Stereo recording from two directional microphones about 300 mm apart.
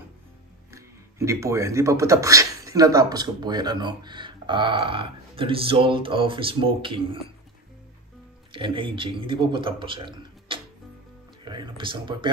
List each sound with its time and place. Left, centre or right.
0.7 s speech: centre
8.5 s speech: centre